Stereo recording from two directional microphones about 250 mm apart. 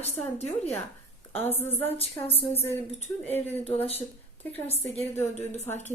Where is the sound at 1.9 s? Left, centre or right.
Left.